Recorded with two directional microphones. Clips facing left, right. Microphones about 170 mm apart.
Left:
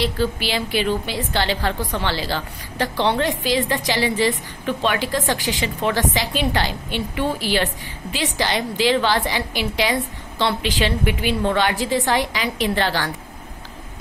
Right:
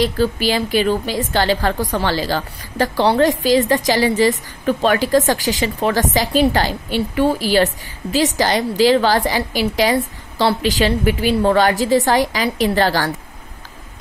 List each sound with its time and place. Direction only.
0.0 s a woman's voice: 45° right (ahead or behind)